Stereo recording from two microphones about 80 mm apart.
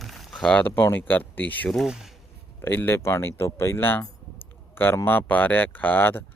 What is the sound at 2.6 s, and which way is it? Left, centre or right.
Speech, left.